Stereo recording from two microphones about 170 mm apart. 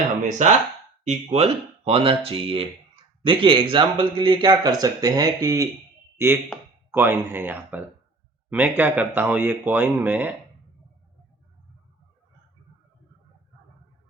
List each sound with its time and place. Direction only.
0.4 s speech: 45° right (ahead or behind); by 10.3 s 10° right (ahead or behind)